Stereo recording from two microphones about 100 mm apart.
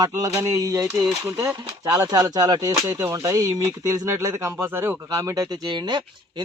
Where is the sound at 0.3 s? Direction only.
30° right (ahead or behind).